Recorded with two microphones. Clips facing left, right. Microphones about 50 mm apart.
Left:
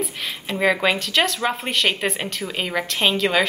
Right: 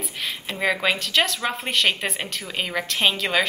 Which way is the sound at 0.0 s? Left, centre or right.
Centre.